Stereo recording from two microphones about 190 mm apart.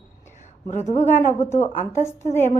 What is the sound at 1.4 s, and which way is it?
Speech, 35° left (ahead or behind).